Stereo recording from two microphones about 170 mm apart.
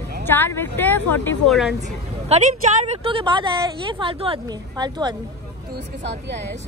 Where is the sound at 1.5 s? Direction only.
Centre (ahead or behind).